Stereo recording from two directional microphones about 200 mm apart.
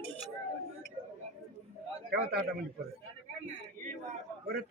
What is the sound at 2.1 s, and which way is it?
Speech, 50° right (ahead or behind).